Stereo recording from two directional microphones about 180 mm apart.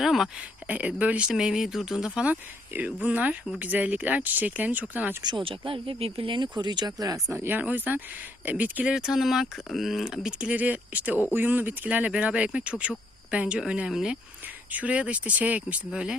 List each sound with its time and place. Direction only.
0.0 s speech: centre (ahead or behind)
5.2 s speech: 25° right (ahead or behind); by 16.1 s 5° right (ahead or behind)